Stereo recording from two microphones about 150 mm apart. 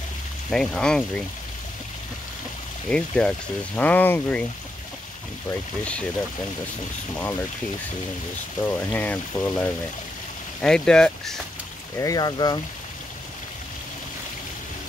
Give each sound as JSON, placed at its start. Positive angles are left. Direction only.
{"t": 0.5, "sound": "speech", "side_deg": 5}
{"t": 2.9, "sound": "speech", "side_deg": 5}
{"t": 8.6, "sound": "speech", "side_deg": 10}
{"t": 12.0, "sound": "speech", "side_deg": 25}